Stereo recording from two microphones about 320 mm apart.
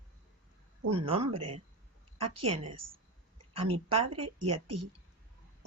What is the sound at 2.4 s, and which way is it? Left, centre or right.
Speech, centre.